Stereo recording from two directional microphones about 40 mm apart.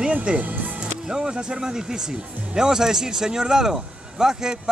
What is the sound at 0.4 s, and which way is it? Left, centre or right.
Speech, right.